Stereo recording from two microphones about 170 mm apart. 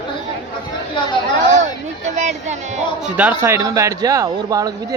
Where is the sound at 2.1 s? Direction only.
45° right (ahead or behind).